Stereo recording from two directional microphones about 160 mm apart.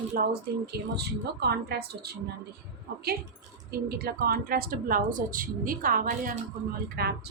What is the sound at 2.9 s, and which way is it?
Speech, 90° right.